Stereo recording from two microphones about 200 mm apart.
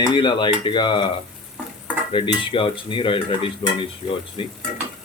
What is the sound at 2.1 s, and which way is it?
Cutlery, 25° left (ahead or behind).